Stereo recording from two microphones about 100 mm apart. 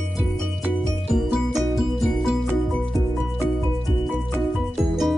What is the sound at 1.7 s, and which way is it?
Music, centre (ahead or behind).